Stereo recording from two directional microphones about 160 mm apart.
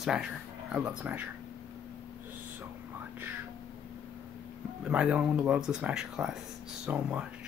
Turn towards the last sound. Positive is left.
turn(degrees=-5)  # may be behind; listen again after turning